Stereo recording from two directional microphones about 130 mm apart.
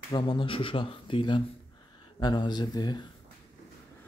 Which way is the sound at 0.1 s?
35° left (ahead or behind).